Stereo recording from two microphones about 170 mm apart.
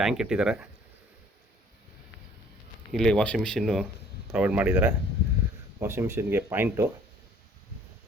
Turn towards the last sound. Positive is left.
turn(degrees=-10)  # may be behind; listen again after turning